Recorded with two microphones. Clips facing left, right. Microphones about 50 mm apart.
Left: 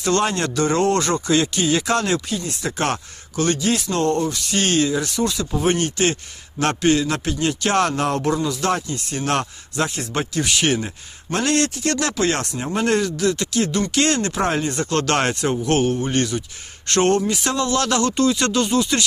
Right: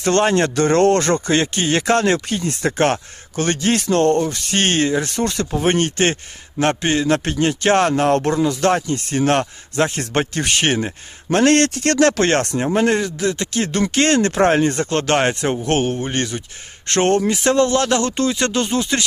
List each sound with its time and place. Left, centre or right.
0.0 s speech: right
6.6 s a man's voice: right
12.8 s speech: right